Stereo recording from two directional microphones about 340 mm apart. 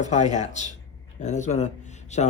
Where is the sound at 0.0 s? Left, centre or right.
Left.